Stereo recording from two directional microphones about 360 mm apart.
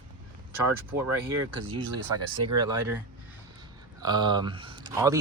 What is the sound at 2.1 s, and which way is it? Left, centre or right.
Speech, right.